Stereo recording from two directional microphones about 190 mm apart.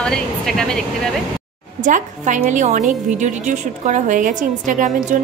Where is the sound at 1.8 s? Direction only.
40° right (ahead or behind).